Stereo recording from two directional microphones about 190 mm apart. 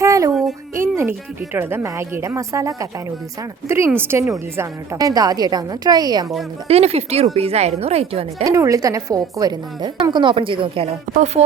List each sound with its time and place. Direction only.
0.0 s a sound: 15° right (ahead or behind)
0.8 s music: 15° right (ahead or behind)
1.5 s a woman's voice: 10° right (ahead or behind)
6.7 s speech: 35° right (ahead or behind)
8.4 s a woman's voice: 15° right (ahead or behind)
11.1 s speech: 40° right (ahead or behind)